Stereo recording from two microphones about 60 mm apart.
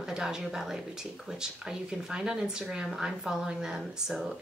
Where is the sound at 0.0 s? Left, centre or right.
Centre.